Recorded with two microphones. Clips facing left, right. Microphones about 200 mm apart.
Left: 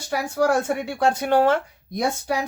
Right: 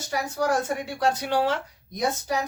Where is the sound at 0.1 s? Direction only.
55° left (ahead or behind).